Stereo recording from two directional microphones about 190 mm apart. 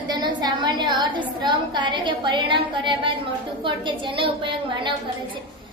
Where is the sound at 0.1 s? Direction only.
20° right (ahead or behind).